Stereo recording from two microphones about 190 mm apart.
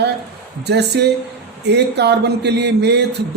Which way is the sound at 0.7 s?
60° right (ahead or behind).